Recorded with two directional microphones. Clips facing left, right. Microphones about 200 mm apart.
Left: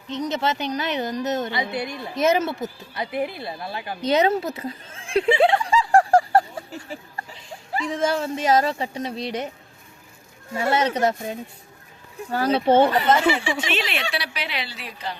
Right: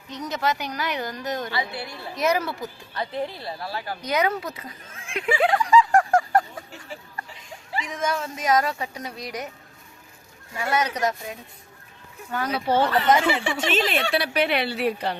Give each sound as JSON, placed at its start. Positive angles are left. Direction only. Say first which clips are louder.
{"t": 0.1, "sound": "a woman's voice", "louder": "left 2 dB", "side_deg": 25}
{"t": 2.9, "sound": "speech", "louder": "left 1 dB", "side_deg": 10}
{"t": 7.2, "sound": "a sound", "louder": "left 2 dB", "side_deg": 30}
{"t": 7.9, "sound": "a woman's voice", "louder": "left 5 dB", "side_deg": 30}
{"t": 10.5, "sound": "a woman's voice", "louder": "left 4 dB", "side_deg": 30}
{"t": 13.4, "sound": "speech", "louder": "right 2 dB", "side_deg": -45}